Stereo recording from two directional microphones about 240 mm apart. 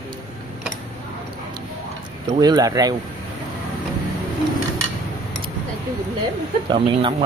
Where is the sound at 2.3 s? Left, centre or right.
Centre.